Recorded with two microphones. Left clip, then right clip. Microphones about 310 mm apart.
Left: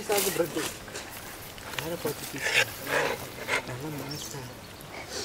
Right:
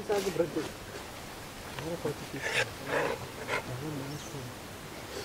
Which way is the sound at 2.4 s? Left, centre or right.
Centre.